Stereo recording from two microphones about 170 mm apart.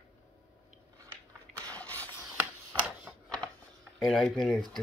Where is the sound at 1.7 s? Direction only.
10° left (ahead or behind).